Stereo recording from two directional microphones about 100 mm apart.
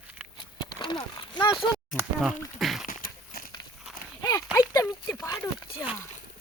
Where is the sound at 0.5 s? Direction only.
50° left (ahead or behind).